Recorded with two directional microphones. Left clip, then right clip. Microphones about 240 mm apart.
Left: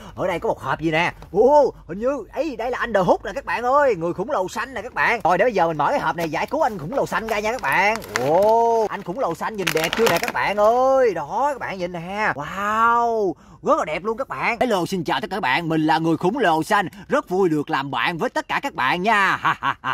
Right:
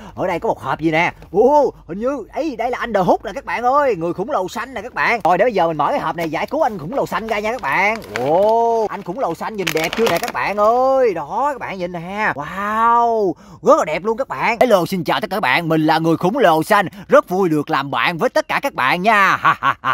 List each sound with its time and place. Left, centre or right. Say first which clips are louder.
0.2 s speech: right 3 dB; right
9.7 s speech: right 1 dB; centre
10.3 s speech: right 2 dB; right
14.7 s speech: right 6 dB; right